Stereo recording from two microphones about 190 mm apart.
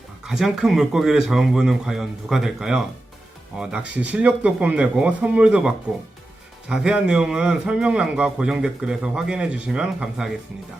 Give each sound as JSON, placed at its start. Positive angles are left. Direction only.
{"t": 0.3, "sound": "a man's voice", "side_deg": 0}